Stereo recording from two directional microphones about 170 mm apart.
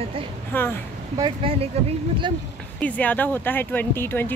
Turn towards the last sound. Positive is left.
turn(degrees=15)  # may be behind; listen again after turning